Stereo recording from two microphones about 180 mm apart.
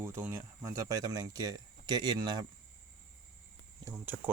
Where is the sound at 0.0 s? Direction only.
15° right (ahead or behind).